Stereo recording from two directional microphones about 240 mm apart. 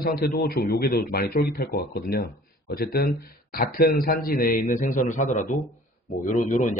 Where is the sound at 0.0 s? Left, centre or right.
Left.